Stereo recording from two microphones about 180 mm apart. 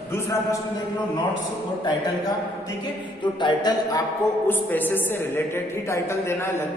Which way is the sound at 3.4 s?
25° left (ahead or behind).